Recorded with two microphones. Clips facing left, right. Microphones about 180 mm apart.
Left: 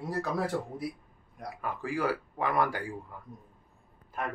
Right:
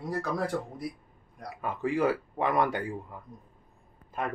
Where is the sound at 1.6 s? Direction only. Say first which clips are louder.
Right 4 dB; 20° right (ahead or behind).